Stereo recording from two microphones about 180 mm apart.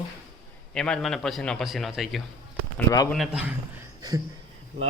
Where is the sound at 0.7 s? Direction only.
5° left (ahead or behind).